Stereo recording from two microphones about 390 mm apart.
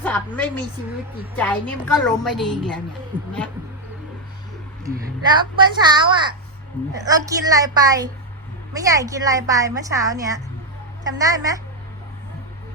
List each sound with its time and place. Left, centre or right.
0.0 s a woman's voice: centre
4.9 s a woman's voice: centre